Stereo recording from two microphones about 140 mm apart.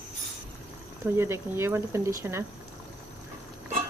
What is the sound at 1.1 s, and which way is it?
Speech, 20° right (ahead or behind).